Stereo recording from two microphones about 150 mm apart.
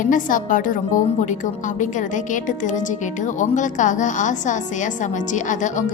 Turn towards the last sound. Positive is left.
turn(degrees=55)  # may be behind; listen again after turning